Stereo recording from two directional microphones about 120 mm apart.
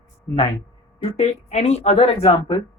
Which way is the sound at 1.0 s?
60° left (ahead or behind).